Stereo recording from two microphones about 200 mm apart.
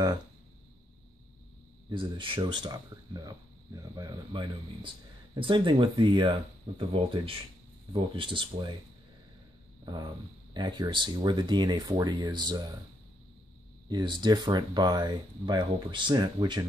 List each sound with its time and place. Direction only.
1.9 s speech: 25° right (ahead or behind)
9.8 s speech: 20° right (ahead or behind)
13.8 s speech: 20° right (ahead or behind)